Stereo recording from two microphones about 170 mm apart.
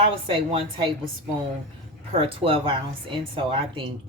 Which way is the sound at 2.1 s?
35° right (ahead or behind).